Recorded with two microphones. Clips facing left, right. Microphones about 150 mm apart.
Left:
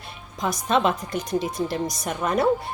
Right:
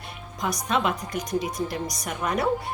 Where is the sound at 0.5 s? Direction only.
30° left (ahead or behind).